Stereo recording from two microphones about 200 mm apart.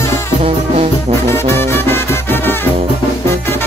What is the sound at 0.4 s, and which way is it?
Music, 30° right (ahead or behind).